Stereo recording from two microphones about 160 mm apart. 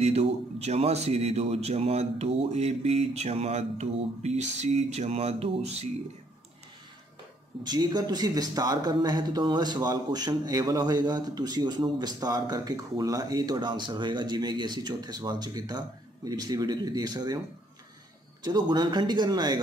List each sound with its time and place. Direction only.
0.0 s a man's voice: 40° right (ahead or behind)
7.6 s speech: 25° right (ahead or behind)
18.4 s speech: 25° right (ahead or behind)